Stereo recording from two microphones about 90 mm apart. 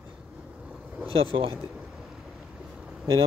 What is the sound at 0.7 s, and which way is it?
Vehicle, 15° right (ahead or behind).